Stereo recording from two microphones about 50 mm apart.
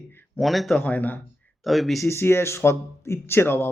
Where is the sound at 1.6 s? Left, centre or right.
Centre.